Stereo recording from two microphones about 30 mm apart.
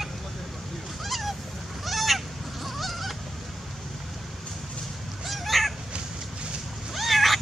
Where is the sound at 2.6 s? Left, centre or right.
Centre.